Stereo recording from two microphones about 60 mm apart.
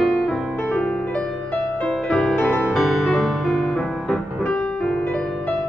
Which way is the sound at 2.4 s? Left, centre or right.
Left.